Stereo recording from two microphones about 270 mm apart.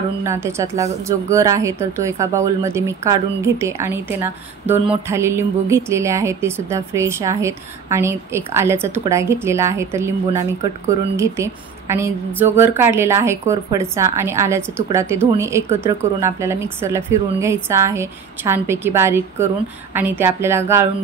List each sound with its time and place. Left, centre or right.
0.2 s a woman's voice: centre